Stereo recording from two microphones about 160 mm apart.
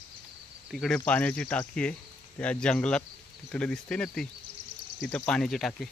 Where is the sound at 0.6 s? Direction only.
Centre (ahead or behind).